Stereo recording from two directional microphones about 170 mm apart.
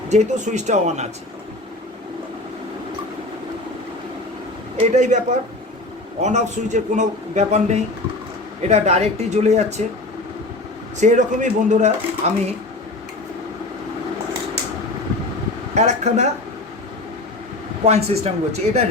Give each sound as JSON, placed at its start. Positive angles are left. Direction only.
{"t": 0.1, "sound": "a man's voice", "side_deg": -45}
{"t": 4.8, "sound": "a man's voice", "side_deg": -45}
{"t": 11.0, "sound": "a man's voice", "side_deg": -45}
{"t": 15.7, "sound": "a man's voice", "side_deg": -45}
{"t": 17.8, "sound": "speech", "side_deg": -40}